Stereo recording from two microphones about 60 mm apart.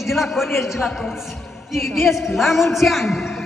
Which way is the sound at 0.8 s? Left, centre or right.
Centre.